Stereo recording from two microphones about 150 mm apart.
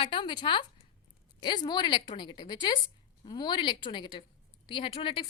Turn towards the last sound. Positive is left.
turn(degrees=35)  # may be behind; listen again after turning